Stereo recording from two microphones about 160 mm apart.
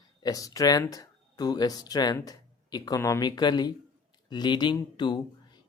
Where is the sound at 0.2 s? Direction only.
25° left (ahead or behind).